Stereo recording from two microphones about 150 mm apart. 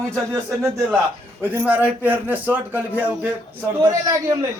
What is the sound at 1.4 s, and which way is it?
Speech, 10° right (ahead or behind).